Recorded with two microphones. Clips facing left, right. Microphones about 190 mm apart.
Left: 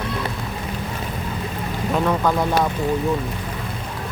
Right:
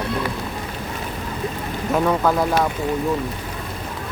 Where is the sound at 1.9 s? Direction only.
5° right (ahead or behind).